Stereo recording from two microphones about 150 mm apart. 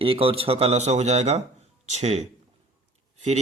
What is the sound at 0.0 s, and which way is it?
Speech, 35° right (ahead or behind).